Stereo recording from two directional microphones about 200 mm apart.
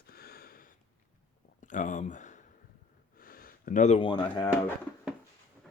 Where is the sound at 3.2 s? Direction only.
45° left (ahead or behind).